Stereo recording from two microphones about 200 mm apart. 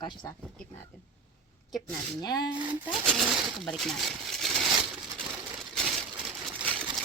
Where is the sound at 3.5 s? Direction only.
Centre (ahead or behind).